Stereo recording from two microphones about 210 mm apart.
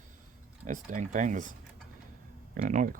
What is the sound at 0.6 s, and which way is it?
Speech, 35° right (ahead or behind).